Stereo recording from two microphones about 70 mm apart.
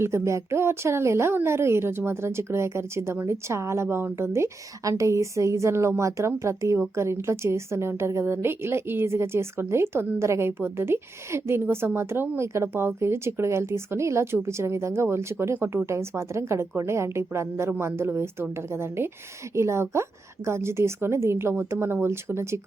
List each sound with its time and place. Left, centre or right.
0.0 s a woman's voice: right